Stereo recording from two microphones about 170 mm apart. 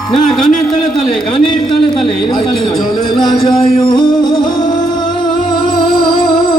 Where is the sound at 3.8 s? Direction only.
25° left (ahead or behind).